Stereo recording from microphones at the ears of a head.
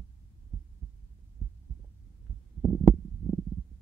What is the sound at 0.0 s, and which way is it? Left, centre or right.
Heart sounds, right.